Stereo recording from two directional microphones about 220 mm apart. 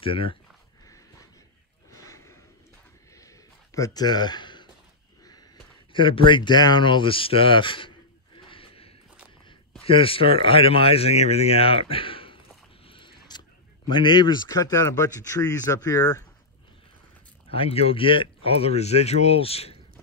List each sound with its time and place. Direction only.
0.0 s speech: 25° left (ahead or behind)
1.9 s gasp: 15° left (ahead or behind)
3.2 s a sound: 15° left (ahead or behind)
5.9 s speech: 20° left (ahead or behind)
8.4 s a sound: 25° left (ahead or behind)
9.8 s speech: 25° left (ahead or behind)
12.8 s creak: 20° left (ahead or behind)
13.8 s speech: 20° left (ahead or behind)
17.5 s speech: 25° left (ahead or behind)